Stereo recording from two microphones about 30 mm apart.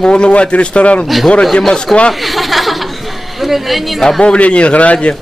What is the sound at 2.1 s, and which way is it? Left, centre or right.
Chuckle, centre.